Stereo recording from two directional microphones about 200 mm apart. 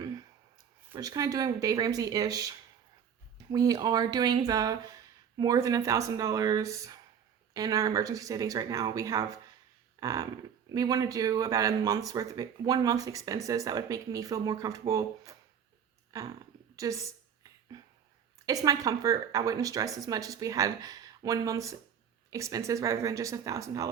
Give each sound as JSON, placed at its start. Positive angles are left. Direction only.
{"t": 0.9, "sound": "speech", "side_deg": -20}
{"t": 16.7, "sound": "a woman's voice", "side_deg": -15}
{"t": 17.7, "sound": "a sound", "side_deg": -20}
{"t": 18.4, "sound": "speech", "side_deg": -15}